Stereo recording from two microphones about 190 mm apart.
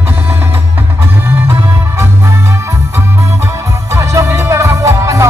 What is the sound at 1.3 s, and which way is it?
Music, 10° right (ahead or behind).